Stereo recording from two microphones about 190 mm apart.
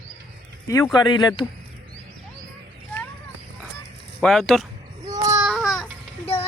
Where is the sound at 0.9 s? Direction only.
25° left (ahead or behind).